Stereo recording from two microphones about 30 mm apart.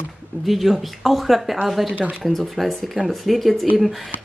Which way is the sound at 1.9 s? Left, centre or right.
Right.